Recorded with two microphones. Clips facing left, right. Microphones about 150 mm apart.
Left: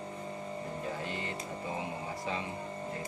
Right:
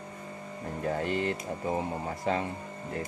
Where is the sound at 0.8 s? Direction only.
60° right (ahead or behind).